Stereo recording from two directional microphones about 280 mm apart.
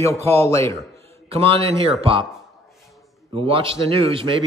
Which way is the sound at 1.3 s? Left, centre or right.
Centre.